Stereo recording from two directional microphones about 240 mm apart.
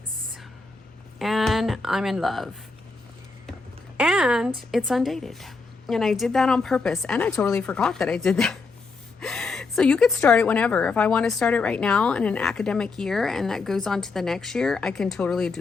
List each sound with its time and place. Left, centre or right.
1.2 s a woman's voice: centre
3.9 s a woman's voice: centre